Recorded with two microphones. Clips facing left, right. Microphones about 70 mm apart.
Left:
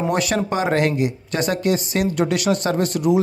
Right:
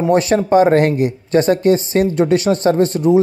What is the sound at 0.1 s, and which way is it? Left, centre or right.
Speech, right.